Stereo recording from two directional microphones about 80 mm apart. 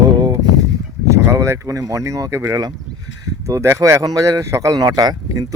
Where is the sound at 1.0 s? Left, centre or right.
Right.